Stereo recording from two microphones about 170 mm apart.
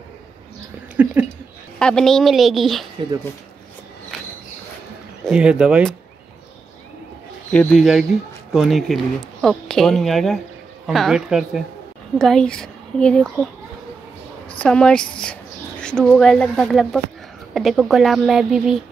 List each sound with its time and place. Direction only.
1.0 s speech: 10° right (ahead or behind)
1.8 s speech: 5° left (ahead or behind)
5.2 s speech: 5° right (ahead or behind)
7.5 s speech: centre (ahead or behind)
14.6 s speech: 5° left (ahead or behind)